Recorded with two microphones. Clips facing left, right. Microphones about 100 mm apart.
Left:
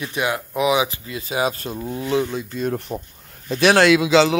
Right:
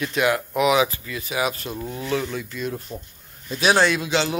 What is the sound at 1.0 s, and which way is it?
Speech, 30° left (ahead or behind).